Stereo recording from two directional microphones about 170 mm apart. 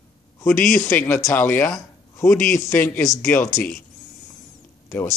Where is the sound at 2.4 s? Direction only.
Centre (ahead or behind).